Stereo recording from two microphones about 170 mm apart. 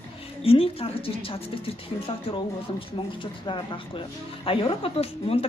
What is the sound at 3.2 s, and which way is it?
A woman's voice, 30° left (ahead or behind).